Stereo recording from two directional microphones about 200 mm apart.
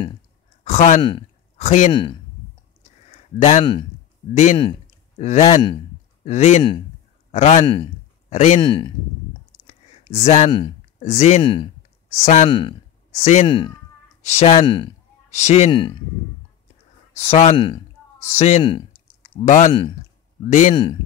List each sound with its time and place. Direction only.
0.7 s speech: 35° left (ahead or behind)
1.9 s speech: 25° left (ahead or behind)
4.3 s a man's voice: 35° left (ahead or behind)
9.7 s a sound: 35° left (ahead or behind)
11.0 s speech: 35° left (ahead or behind)
12.2 s speech: 35° left (ahead or behind)
12.4 s speech: 25° left (ahead or behind)
13.5 s speech: 25° left (ahead or behind)
17.2 s speech: 30° left (ahead or behind)
19.2 s speech: 35° left (ahead or behind)
20.7 s speech: 25° left (ahead or behind)